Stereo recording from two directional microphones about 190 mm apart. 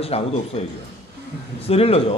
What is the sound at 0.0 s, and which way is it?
Speech, 30° left (ahead or behind).